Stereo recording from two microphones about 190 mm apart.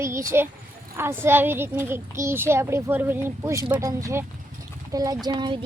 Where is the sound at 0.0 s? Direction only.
15° right (ahead or behind).